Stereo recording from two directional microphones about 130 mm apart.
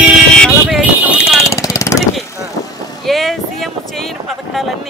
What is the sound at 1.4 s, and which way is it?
Jackhammer, 25° left (ahead or behind).